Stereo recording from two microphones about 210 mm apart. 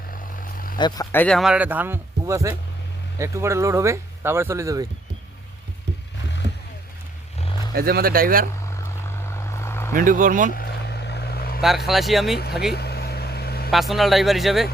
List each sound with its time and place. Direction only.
0.8 s speech: 20° left (ahead or behind)
1.1 s speech: 5° left (ahead or behind); by 4.9 s 15° right (ahead or behind)
7.7 s speech: 45° right (ahead or behind)
8.6 s vehicle: 15° left (ahead or behind)
9.9 s speech: 40° right (ahead or behind)
10.5 s vehicle: 50° left (ahead or behind)
11.9 s a man's voice: centre (ahead or behind)
12.7 s vehicle: 50° left (ahead or behind)
13.7 s a man's voice: centre (ahead or behind)